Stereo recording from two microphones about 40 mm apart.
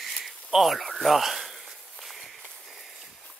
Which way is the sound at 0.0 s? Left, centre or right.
Centre.